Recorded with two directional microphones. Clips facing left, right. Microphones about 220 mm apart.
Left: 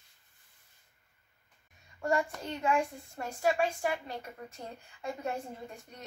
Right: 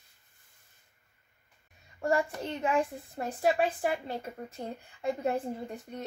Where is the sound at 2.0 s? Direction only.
30° right (ahead or behind).